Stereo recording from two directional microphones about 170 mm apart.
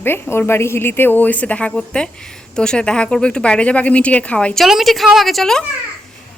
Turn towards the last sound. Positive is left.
turn(degrees=0)  # may be behind; listen again after turning